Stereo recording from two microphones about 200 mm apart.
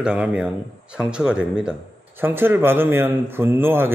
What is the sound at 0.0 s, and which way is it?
Speech, 5° right (ahead or behind).